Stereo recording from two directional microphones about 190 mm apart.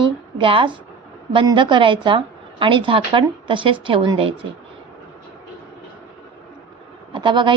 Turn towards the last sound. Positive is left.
turn(degrees=-25)  # may be behind; listen again after turning